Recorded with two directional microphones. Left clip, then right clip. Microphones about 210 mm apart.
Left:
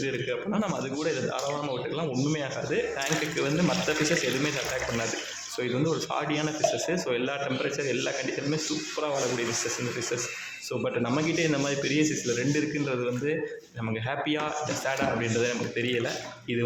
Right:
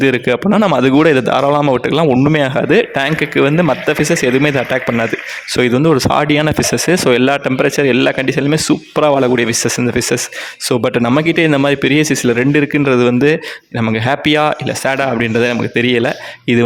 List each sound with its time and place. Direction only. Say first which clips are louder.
0.0 s a man's voice: right 17 dB; 50° right (ahead or behind)